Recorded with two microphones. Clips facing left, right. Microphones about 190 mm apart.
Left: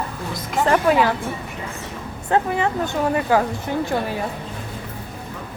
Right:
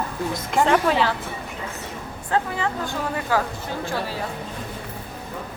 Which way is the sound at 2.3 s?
20° left (ahead or behind).